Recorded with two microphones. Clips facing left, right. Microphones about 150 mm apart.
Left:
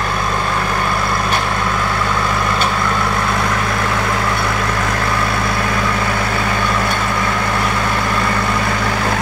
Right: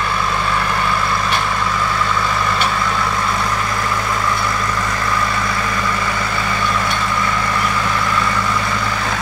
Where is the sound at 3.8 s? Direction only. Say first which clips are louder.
Left 2 dB; 60° left (ahead or behind).